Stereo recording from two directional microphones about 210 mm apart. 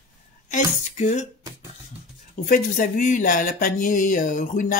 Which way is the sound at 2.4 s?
40° left (ahead or behind).